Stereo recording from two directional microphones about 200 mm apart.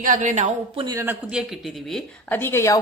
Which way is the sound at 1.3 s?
Centre (ahead or behind).